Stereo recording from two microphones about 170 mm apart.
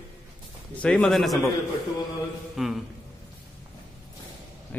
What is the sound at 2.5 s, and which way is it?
Speech, centre (ahead or behind).